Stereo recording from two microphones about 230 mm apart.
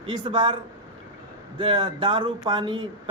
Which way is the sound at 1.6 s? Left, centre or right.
Right.